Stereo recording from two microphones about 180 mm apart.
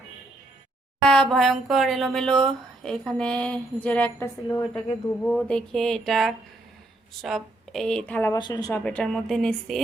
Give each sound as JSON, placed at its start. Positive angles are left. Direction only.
{"t": 1.0, "sound": "speech", "side_deg": 5}
{"t": 8.3, "sound": "speech", "side_deg": 25}
{"t": 8.7, "sound": "speech", "side_deg": 10}